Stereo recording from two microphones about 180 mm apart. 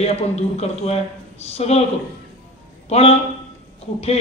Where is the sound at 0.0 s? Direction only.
35° left (ahead or behind).